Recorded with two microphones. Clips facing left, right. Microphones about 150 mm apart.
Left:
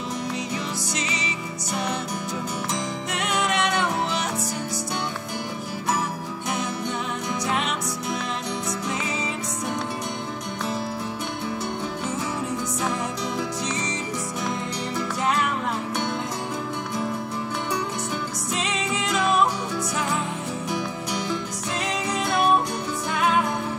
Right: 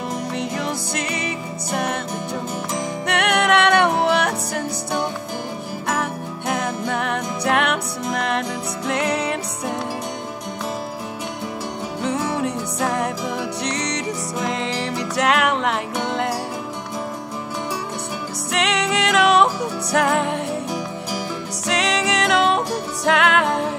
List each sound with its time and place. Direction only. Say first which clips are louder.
0.4 s music: right 4 dB; 60° right (ahead or behind)
3.1 s music: right 8 dB; 70° right (ahead or behind)
5.9 s music: right 2 dB; 60° right (ahead or behind)
12.0 s music: right 11 dB; 70° right (ahead or behind); by 16.3 s 85° right
18.5 s music: right 7 dB; 75° right (ahead or behind)
21.6 s music: right 8 dB; 90° right